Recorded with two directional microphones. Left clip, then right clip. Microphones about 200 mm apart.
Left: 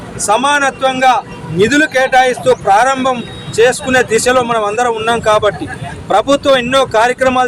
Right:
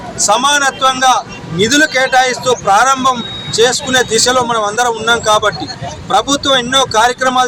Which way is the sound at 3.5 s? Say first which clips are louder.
Left 1 dB; 30° left (ahead or behind).